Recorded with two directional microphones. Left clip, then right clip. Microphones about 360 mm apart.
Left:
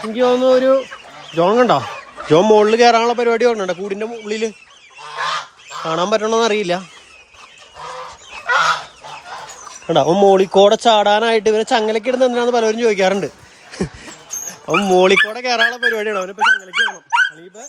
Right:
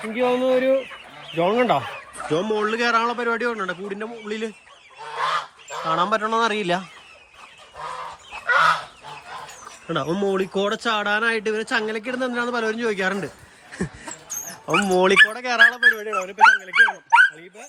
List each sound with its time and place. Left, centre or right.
0.0 s speech: centre
5.1 s goose: centre
5.9 s speech: centre
9.9 s speech: centre
13.7 s a sound: centre
14.7 s speech: centre
16.0 s speech: left
16.7 s speech: right